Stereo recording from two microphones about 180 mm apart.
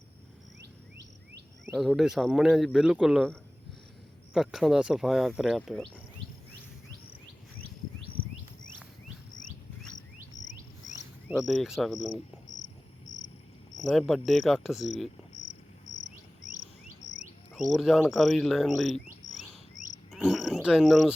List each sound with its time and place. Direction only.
1.8 s speech: centre (ahead or behind)
4.4 s speech: centre (ahead or behind)
10.3 s insect: 45° left (ahead or behind)
11.3 s speech: centre (ahead or behind)
14.1 s speech: centre (ahead or behind)
17.0 s a sound: 20° left (ahead or behind)
17.5 s speech: centre (ahead or behind)
20.1 s a sound: centre (ahead or behind)